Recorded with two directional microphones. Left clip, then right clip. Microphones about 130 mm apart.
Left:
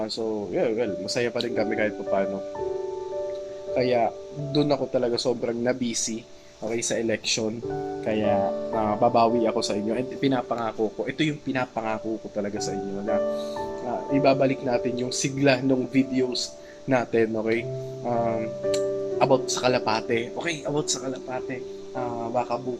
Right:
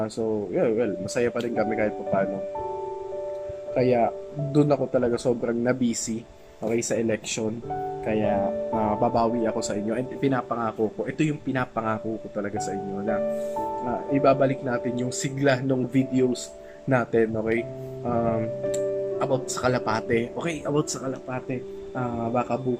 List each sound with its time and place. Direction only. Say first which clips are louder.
0.0 s speech: right 1 dB; 5° right (ahead or behind)
3.8 s speech: right 1 dB; 15° right (ahead or behind)
6.7 s speech: even; 10° right (ahead or behind)
11.2 s speech: even; 10° right (ahead or behind)
14.1 s speech: even; 5° right (ahead or behind)